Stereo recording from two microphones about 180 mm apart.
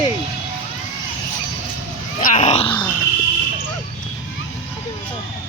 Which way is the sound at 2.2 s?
45° left (ahead or behind).